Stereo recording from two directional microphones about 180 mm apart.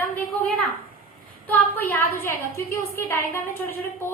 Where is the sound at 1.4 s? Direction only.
10° left (ahead or behind).